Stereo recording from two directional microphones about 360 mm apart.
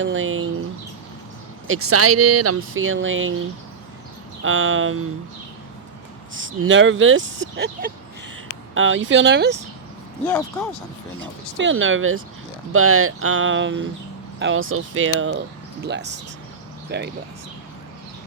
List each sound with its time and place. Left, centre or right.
0.0 s speech: right
1.6 s speech: right
4.4 s speech: right
6.3 s speech: right
10.2 s speech: centre
11.5 s speech: right